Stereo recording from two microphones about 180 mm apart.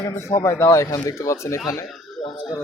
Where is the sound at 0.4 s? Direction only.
15° left (ahead or behind).